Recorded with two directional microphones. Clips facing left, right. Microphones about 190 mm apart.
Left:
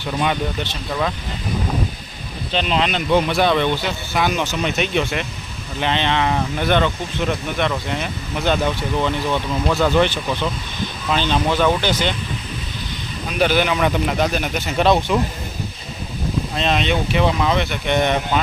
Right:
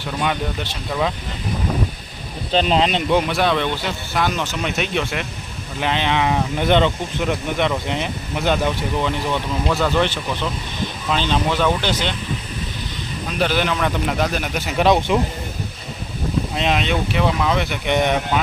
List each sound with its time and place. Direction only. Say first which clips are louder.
0.2 s speech: left 1 dB; 5° right (ahead or behind)
2.5 s speech: right 3 dB; 40° right (ahead or behind)
3.1 s speech: left 5 dB; 5° right (ahead or behind)
9.6 s speech: left 3 dB; 5° left (ahead or behind)
11.1 s speech: left 1 dB; centre (ahead or behind)
13.4 s speech: left 3 dB; 5° left (ahead or behind)
14.8 s speech: right 1 dB; 15° right (ahead or behind)
16.6 s speech: left 1 dB; 10° right (ahead or behind)